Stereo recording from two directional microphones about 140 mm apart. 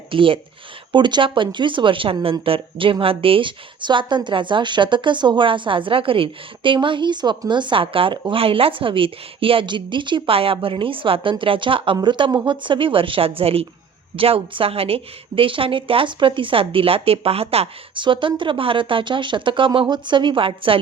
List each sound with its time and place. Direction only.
0.1 s a woman's voice: 40° right (ahead or behind)